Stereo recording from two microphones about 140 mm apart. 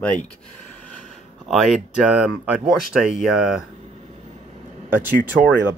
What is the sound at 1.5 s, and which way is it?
Speech, centre (ahead or behind).